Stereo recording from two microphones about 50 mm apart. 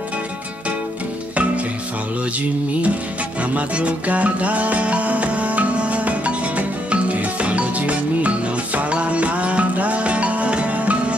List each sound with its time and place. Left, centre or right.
3.5 s music: right